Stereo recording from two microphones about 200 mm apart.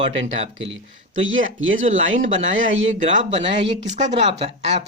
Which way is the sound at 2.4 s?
70° right (ahead or behind).